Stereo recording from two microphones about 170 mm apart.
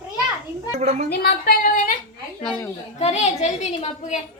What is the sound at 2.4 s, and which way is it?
Speech, 5° left (ahead or behind).